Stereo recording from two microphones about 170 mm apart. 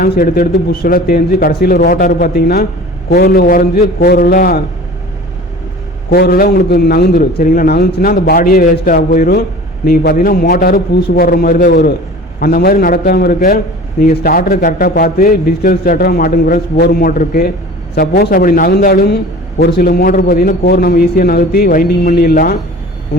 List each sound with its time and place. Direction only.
0.0 s a man's voice: 60° left (ahead or behind)
6.1 s a man's voice: 60° left (ahead or behind)